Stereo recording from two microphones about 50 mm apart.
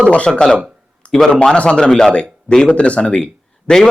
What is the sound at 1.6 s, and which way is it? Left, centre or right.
A man's voice, centre.